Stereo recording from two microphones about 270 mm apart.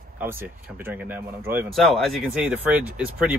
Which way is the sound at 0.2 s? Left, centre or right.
Centre.